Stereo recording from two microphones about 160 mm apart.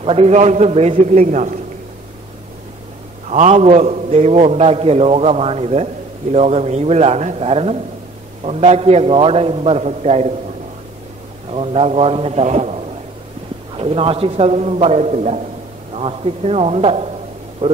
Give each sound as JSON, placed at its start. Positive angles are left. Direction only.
{"t": 0.0, "sound": "a man's voice", "side_deg": -40}
{"t": 3.3, "sound": "a man's voice", "side_deg": -45}
{"t": 11.5, "sound": "a man's voice", "side_deg": -40}